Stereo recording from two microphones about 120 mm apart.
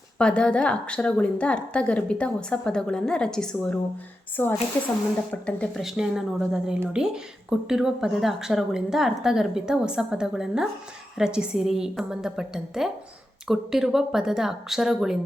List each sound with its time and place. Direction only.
0.2 s a woman's voice: 10° left (ahead or behind)
4.4 s a woman's voice: 15° left (ahead or behind)
5.8 s a woman's voice: 5° right (ahead or behind)